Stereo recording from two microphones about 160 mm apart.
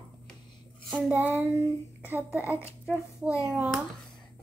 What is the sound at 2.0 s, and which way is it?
Speech, 15° right (ahead or behind).